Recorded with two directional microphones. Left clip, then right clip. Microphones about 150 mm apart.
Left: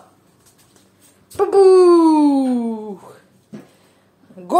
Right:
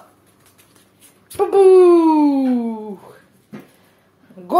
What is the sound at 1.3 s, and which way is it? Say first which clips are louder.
Speech: even; centre (ahead or behind).